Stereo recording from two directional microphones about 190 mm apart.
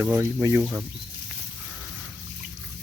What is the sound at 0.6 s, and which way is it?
Speech, centre (ahead or behind).